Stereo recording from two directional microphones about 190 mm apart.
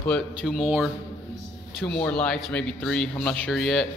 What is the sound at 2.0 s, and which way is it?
A man's voice, 5° left (ahead or behind).